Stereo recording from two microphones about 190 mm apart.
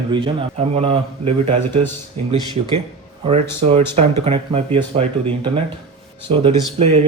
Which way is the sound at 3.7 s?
35° right (ahead or behind).